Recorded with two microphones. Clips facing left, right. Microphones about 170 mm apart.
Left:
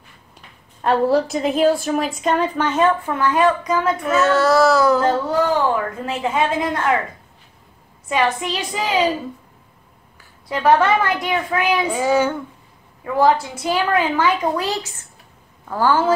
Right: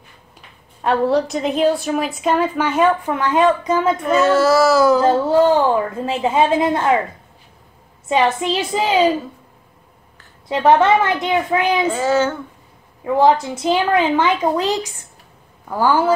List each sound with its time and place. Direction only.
0.8 s a woman's voice: centre (ahead or behind); by 3.9 s 25° right (ahead or behind)
4.0 s a woman's voice: centre (ahead or behind)
5.0 s a woman's voice: 30° right (ahead or behind)
8.1 s a woman's voice: 25° right (ahead or behind)
10.5 s a woman's voice: 25° right (ahead or behind)
11.9 s speech: 10° left (ahead or behind)
13.0 s a woman's voice: 20° right (ahead or behind)